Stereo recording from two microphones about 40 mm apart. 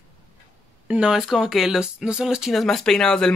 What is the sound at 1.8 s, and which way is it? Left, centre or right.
Speech, right.